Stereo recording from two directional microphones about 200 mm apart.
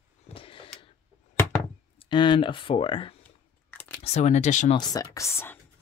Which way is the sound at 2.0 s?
25° left (ahead or behind).